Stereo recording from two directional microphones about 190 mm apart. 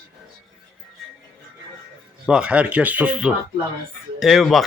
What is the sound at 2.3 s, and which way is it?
A man's voice, 5° right (ahead or behind).